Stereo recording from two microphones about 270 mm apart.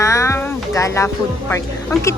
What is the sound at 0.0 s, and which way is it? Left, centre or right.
Speech, centre.